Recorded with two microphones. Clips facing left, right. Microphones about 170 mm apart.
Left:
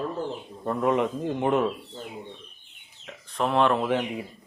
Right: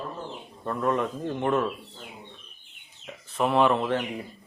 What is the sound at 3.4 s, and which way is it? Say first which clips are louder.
Speech: even; centre (ahead or behind).